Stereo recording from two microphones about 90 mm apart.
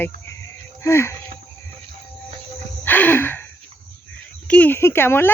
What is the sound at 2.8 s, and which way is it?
Gasp, 20° left (ahead or behind).